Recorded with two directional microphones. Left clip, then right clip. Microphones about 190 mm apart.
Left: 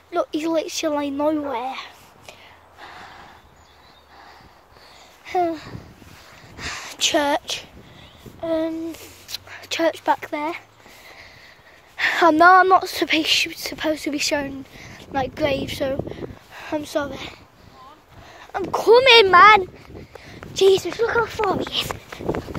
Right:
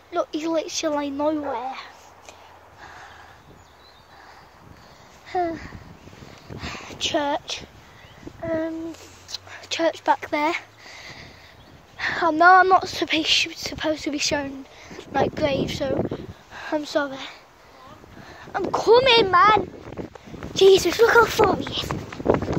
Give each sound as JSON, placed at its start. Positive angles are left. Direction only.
{"t": 0.1, "sound": "speech", "side_deg": 20}
{"t": 1.4, "sound": "a sound", "side_deg": 20}
{"t": 5.3, "sound": "speech", "side_deg": 30}
{"t": 6.6, "sound": "a sound", "side_deg": 0}
{"t": 7.0, "sound": "speech", "side_deg": 15}
{"t": 10.3, "sound": "speech", "side_deg": -10}
{"t": 12.0, "sound": "a sound", "side_deg": 25}
{"t": 12.4, "sound": "speech", "side_deg": 10}
{"t": 16.5, "sound": "speech", "side_deg": 0}
{"t": 18.4, "sound": "speech", "side_deg": 10}
{"t": 19.1, "sound": "speech", "side_deg": 35}
{"t": 20.8, "sound": "speech", "side_deg": -50}
{"t": 21.8, "sound": "speech", "side_deg": 15}